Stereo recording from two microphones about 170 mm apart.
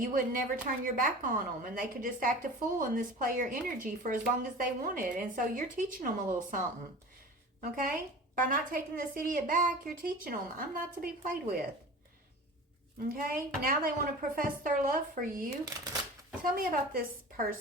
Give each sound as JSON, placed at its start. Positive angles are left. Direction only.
{"t": 0.0, "sound": "a woman's voice", "side_deg": -50}
{"t": 7.6, "sound": "a woman's voice", "side_deg": -55}
{"t": 13.3, "sound": "a woman's voice", "side_deg": -55}
{"t": 15.6, "sound": "speech", "side_deg": -20}
{"t": 16.4, "sound": "a woman's voice", "side_deg": -55}